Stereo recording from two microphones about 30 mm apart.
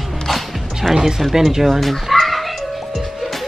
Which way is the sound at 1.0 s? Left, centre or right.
Centre.